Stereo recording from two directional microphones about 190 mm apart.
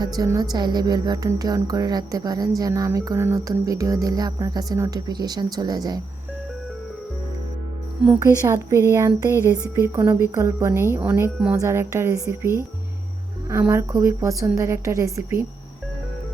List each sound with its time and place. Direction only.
0.0 s music: 20° right (ahead or behind)
8.2 s speech: 15° right (ahead or behind)